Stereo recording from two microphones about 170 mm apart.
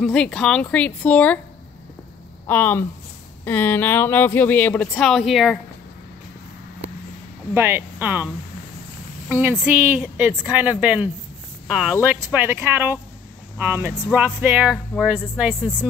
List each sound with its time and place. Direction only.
0.0 s speech: 5° left (ahead or behind)
2.4 s speech: 10° left (ahead or behind)
7.5 s speech: 15° right (ahead or behind)
9.3 s speech: 10° right (ahead or behind)